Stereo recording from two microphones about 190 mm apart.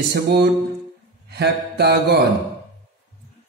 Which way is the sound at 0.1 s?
60° right (ahead or behind).